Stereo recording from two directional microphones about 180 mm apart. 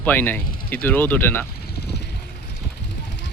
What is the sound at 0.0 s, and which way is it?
Speech, 10° left (ahead or behind).